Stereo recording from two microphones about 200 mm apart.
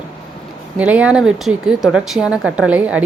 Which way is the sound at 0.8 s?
5° right (ahead or behind).